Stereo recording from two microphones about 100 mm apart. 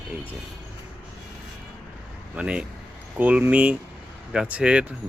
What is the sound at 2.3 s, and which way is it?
Speech, 10° right (ahead or behind).